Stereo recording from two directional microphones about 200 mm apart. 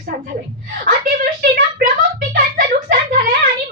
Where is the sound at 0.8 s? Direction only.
40° right (ahead or behind).